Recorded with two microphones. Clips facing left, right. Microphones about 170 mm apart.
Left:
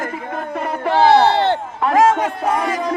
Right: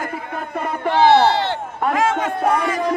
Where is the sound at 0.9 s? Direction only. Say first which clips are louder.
Left 1 dB; 50° left (ahead or behind).